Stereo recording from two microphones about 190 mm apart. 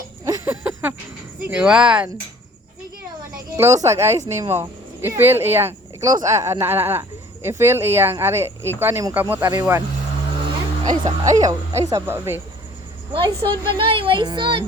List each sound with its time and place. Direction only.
0.3 s a sound: 10° right (ahead or behind)
1.5 s speech: 5° right (ahead or behind)
3.6 s speech: 15° right (ahead or behind)
10.8 s speech: 20° right (ahead or behind)
13.1 s speech: 25° right (ahead or behind)